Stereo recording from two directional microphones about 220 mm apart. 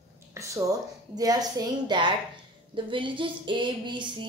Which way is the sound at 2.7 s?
20° right (ahead or behind).